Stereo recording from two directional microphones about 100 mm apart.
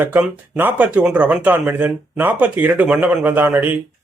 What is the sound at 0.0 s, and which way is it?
Speech, 15° right (ahead or behind).